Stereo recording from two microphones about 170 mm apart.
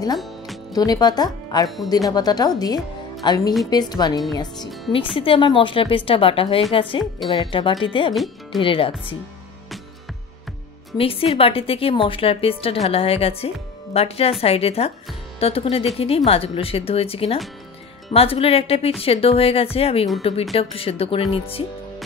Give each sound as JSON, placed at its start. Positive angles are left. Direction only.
{"t": 0.7, "sound": "speech", "side_deg": 25}
{"t": 8.1, "sound": "speech", "side_deg": 0}
{"t": 8.5, "sound": "speech", "side_deg": 30}
{"t": 11.0, "sound": "speech", "side_deg": 35}